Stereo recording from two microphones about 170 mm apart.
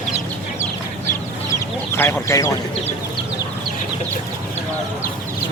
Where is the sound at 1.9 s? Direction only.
15° left (ahead or behind).